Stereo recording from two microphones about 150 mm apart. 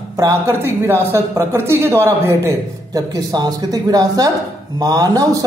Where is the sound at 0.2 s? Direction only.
20° right (ahead or behind).